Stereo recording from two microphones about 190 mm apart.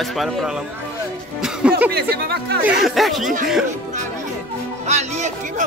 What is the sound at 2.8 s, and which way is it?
Speech, centre (ahead or behind).